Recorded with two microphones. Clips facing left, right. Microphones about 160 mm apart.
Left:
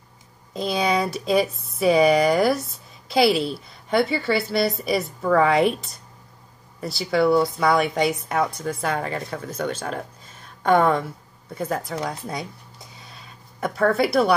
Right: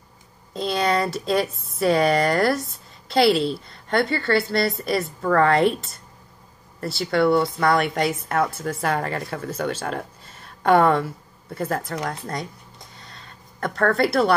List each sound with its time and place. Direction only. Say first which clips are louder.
0.5 s a woman's voice: even; centre (ahead or behind)